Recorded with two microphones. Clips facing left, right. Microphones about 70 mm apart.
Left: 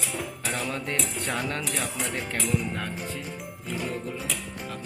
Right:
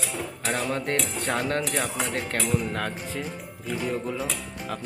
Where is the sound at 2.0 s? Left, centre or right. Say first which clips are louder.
Right 3 dB; right.